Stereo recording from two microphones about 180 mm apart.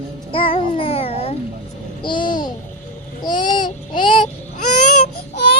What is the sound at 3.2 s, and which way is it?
Child singing, 25° left (ahead or behind).